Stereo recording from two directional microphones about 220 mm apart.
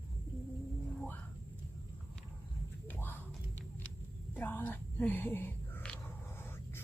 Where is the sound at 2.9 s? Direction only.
10° left (ahead or behind).